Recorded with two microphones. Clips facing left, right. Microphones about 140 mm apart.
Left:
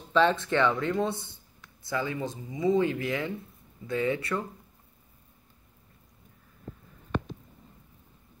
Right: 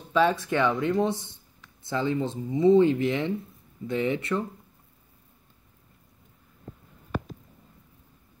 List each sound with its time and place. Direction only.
0.1 s speech: 10° right (ahead or behind)